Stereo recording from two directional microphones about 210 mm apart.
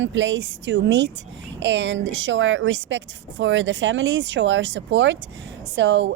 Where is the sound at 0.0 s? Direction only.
65° right (ahead or behind).